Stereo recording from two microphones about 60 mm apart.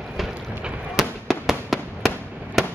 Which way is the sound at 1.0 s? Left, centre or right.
Centre.